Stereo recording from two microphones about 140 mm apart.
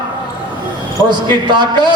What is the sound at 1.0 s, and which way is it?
Speech, 30° right (ahead or behind).